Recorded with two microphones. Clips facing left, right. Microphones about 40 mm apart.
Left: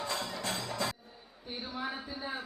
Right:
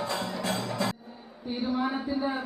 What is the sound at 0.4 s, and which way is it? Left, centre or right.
Music, right.